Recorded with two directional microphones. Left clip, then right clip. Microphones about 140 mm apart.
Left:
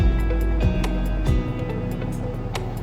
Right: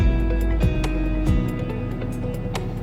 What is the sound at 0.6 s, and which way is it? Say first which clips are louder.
Music: right 1 dB; centre (ahead or behind).